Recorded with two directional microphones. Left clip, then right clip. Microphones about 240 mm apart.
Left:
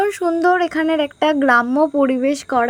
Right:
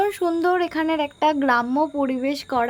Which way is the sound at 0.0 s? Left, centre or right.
Centre.